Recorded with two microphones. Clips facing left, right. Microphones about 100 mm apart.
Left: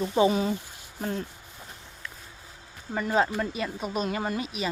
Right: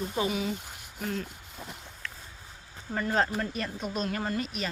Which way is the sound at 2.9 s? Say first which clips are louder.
Left 3 dB; 10° left (ahead or behind).